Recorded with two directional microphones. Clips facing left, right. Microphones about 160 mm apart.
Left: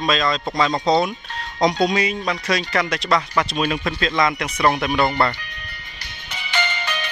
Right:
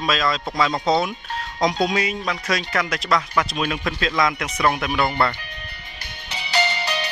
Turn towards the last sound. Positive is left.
turn(degrees=-35)  # may be behind; listen again after turning